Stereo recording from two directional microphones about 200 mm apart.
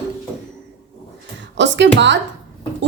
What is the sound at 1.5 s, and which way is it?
Speech, 65° right (ahead or behind).